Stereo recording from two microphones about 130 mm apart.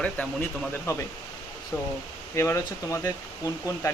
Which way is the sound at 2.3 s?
25° left (ahead or behind).